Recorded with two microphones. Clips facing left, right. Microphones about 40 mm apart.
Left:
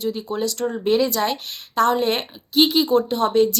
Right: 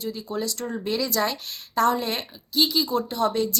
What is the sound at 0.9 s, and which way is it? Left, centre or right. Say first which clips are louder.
Speech: left 9 dB; left.